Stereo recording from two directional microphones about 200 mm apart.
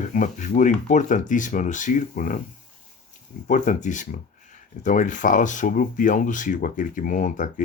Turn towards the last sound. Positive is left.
turn(degrees=40)  # may be behind; listen again after turning